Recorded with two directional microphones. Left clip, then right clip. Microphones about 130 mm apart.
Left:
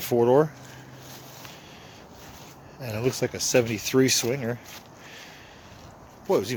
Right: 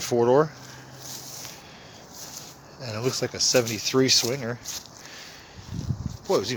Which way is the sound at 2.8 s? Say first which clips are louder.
Left 1 dB; 35° left (ahead or behind).